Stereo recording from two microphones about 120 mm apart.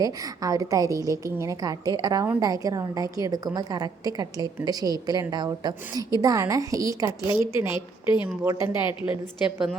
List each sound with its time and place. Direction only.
0.0 s a woman's voice: 30° right (ahead or behind)
8.0 s a woman's voice: 40° left (ahead or behind)